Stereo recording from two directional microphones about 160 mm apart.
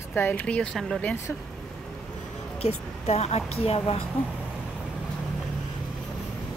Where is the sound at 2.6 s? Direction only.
40° left (ahead or behind).